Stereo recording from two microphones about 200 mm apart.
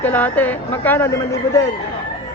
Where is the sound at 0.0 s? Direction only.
10° left (ahead or behind).